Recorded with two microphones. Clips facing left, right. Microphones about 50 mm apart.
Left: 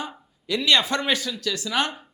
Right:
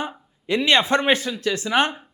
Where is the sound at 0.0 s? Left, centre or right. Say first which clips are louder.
Right 4 dB; right.